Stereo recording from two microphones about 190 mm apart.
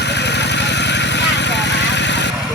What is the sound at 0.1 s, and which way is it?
Vehicle, 65° left (ahead or behind).